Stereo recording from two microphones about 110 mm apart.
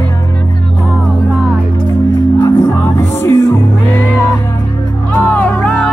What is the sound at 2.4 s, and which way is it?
Music, 25° left (ahead or behind).